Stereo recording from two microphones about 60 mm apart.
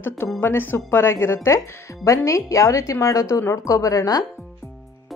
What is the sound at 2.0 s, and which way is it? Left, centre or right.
Speech, left.